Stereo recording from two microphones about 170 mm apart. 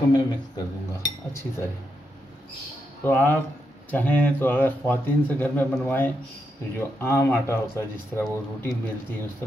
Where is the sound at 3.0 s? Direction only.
10° left (ahead or behind).